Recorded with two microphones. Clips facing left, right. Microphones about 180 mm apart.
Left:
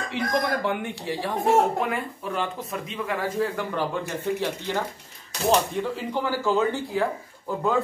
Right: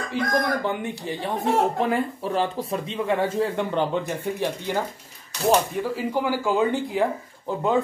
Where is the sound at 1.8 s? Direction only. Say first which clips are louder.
Right 4 dB; 30° right (ahead or behind); by 7.1 s 15° right (ahead or behind).